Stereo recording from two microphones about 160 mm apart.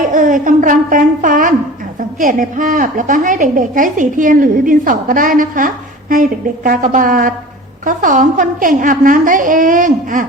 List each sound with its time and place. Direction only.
0.1 s a woman's voice: 55° right (ahead or behind)